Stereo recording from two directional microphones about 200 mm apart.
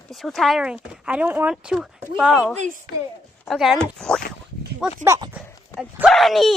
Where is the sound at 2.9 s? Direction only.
50° left (ahead or behind).